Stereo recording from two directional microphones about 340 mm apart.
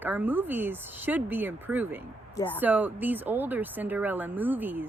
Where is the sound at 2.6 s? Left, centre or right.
Centre.